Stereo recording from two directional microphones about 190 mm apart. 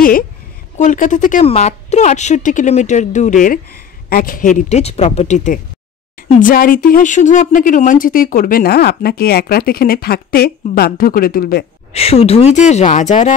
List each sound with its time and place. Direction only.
0.7 s speech: 40° left (ahead or behind)
11.9 s speech: 30° left (ahead or behind)